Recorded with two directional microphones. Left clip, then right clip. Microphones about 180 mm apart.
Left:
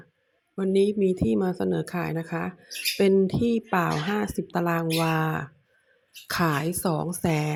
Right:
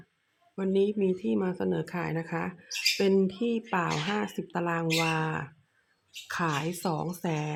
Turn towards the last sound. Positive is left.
turn(degrees=25)  # may be behind; listen again after turning